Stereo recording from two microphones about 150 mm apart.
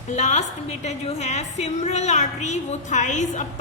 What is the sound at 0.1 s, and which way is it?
A woman's voice, 50° left (ahead or behind).